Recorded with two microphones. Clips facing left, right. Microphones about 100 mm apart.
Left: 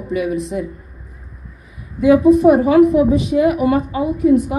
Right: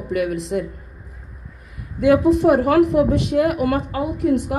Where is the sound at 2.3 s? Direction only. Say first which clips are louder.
Left 4 dB; 85° right.